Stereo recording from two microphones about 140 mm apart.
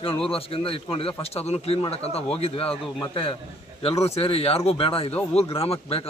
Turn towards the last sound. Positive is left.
turn(degrees=45)  # may be behind; listen again after turning